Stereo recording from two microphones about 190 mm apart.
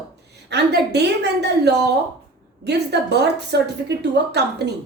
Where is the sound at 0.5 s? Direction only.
60° right (ahead or behind).